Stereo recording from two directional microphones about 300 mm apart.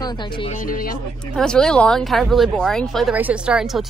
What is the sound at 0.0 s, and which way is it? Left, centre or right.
Speech, centre.